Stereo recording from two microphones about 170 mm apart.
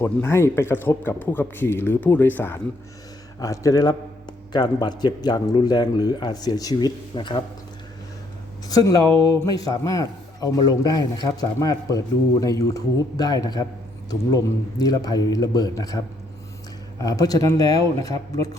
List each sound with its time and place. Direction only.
0.0 s a man's voice: 15° left (ahead or behind)
8.6 s a man's voice: 20° left (ahead or behind)
17.0 s a man's voice: 20° left (ahead or behind)